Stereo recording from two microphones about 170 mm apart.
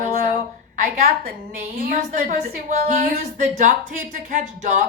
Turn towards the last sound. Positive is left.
turn(degrees=-45)  # may be behind; listen again after turning